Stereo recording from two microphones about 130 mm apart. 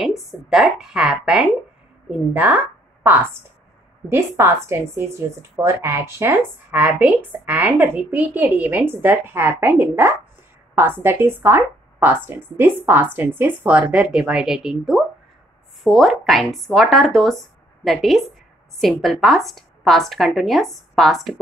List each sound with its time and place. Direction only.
0.0 s a woman's voice: centre (ahead or behind)
4.4 s a woman's voice: 20° right (ahead or behind); by 21.4 s centre (ahead or behind)